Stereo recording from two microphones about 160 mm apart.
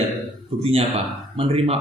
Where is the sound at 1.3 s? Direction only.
35° right (ahead or behind).